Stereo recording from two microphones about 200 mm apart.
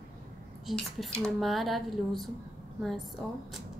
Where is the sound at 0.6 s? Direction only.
Centre (ahead or behind).